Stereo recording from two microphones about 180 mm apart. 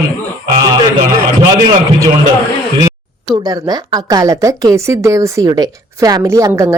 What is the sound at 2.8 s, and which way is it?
Speech, 25° right (ahead or behind).